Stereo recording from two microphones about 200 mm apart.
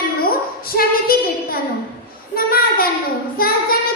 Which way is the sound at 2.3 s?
50° left (ahead or behind).